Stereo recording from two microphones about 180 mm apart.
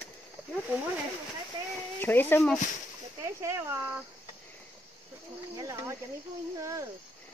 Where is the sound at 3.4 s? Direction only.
10° right (ahead or behind).